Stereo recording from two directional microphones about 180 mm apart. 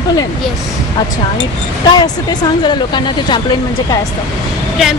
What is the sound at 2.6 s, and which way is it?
Speech, 25° left (ahead or behind).